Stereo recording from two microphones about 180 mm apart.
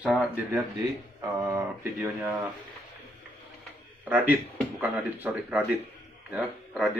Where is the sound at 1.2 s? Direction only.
15° right (ahead or behind).